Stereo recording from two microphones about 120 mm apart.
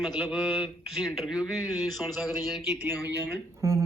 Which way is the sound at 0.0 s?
5° right (ahead or behind).